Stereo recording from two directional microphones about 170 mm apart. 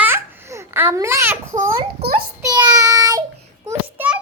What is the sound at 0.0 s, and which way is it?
Babbling, 15° right (ahead or behind).